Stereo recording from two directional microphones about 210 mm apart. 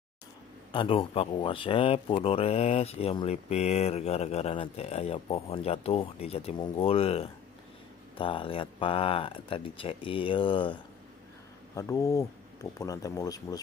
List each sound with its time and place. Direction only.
0.7 s speech: 25° left (ahead or behind)